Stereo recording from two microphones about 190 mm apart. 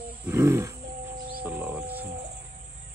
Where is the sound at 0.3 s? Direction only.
15° right (ahead or behind).